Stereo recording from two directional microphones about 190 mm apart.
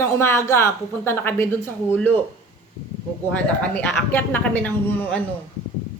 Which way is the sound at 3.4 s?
10° left (ahead or behind).